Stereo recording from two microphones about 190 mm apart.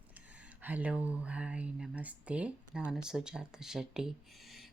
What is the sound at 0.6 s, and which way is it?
Speech, 10° right (ahead or behind).